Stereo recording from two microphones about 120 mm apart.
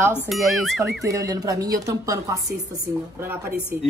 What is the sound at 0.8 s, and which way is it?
Speech, 25° right (ahead or behind).